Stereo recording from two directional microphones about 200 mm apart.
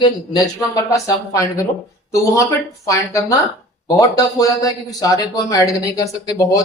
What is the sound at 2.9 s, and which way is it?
Speech, 15° left (ahead or behind).